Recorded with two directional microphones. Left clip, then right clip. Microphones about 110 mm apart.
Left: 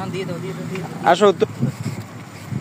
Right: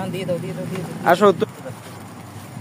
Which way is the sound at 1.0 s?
Centre (ahead or behind).